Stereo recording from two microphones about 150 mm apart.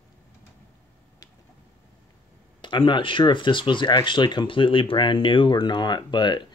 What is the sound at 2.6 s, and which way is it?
Speech, 30° left (ahead or behind).